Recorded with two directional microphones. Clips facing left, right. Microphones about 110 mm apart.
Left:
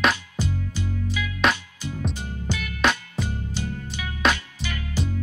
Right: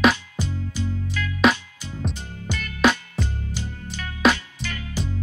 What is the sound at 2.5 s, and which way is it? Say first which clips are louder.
Music: left 1 dB; 10° right (ahead or behind).